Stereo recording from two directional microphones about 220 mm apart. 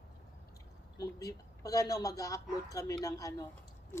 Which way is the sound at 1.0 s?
15° left (ahead or behind).